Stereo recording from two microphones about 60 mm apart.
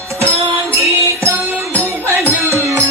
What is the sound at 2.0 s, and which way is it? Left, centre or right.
Music, right.